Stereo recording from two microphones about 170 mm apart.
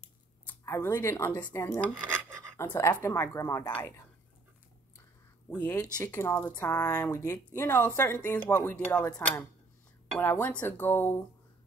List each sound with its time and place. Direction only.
0.5 s speech: 15° left (ahead or behind)
5.5 s speech: 10° left (ahead or behind)
10.1 s speech: 10° left (ahead or behind)